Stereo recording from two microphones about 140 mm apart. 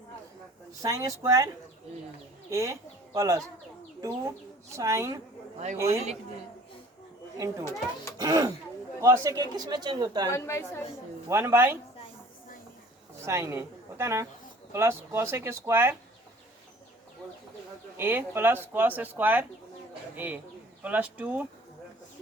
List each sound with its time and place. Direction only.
0.8 s speech: 25° right (ahead or behind)
2.5 s speech: 20° right (ahead or behind)
4.7 s speech: 20° right (ahead or behind)
7.3 s speech: 25° right (ahead or behind)
10.2 s a woman's voice: 20° left (ahead or behind)
11.3 s speech: 20° right (ahead or behind)
13.2 s speech: 20° right (ahead or behind)
17.9 s speech: 15° right (ahead or behind)